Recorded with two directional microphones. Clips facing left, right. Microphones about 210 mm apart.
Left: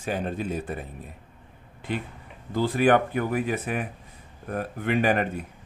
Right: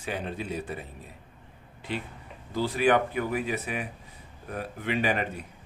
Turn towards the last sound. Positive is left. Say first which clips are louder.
# left 4 dB
turn(degrees=50)  # may be behind; listen again after turning